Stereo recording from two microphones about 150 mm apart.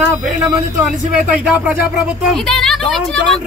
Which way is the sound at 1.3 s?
10° right (ahead or behind).